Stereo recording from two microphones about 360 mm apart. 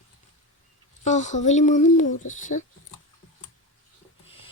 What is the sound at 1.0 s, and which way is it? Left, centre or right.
Speech, centre.